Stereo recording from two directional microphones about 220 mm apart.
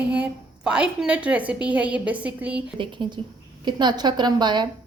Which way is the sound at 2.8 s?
20° right (ahead or behind).